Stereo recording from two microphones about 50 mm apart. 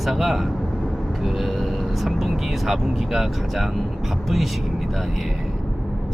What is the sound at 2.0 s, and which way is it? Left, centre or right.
Speech, centre.